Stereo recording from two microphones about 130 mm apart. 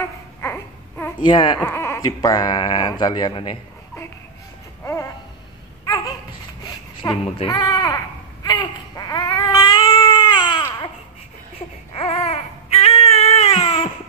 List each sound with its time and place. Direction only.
0.4 s babbling: 15° left (ahead or behind)
1.2 s speech: 40° left (ahead or behind)
1.6 s baby cry: 20° left (ahead or behind)
2.0 s speech: 30° left (ahead or behind)
7.0 s speech: 25° left (ahead or behind)
7.4 s baby cry: 30° left (ahead or behind)
11.5 s baby cry: 50° left (ahead or behind)